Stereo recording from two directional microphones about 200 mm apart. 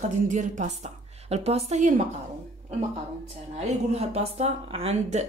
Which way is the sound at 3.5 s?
30° right (ahead or behind).